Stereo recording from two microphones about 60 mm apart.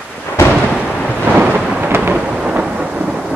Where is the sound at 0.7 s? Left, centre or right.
Centre.